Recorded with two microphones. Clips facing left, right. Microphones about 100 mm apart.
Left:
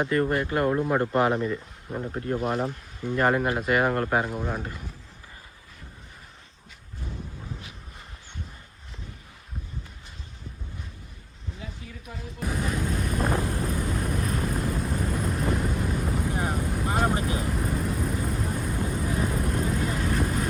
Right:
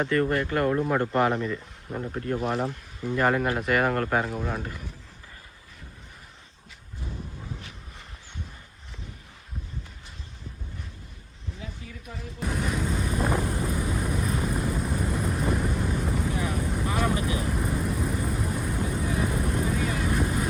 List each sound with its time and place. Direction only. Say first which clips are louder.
0.3 s speech: even; 10° left (ahead or behind)
2.4 s speech: even; centre (ahead or behind)
11.6 s a sound: even; centre (ahead or behind)
13.2 s vehicle: even; 10° right (ahead or behind)
17.2 s vehicle: even; 45° left (ahead or behind)
17.4 s vehicle: even; centre (ahead or behind)